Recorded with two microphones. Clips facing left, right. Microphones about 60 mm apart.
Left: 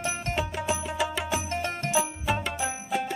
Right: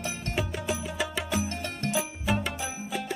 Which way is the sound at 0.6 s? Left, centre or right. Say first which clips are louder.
Left 3 dB; centre.